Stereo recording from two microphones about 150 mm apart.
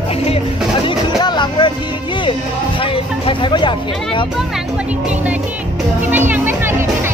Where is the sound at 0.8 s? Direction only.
30° left (ahead or behind).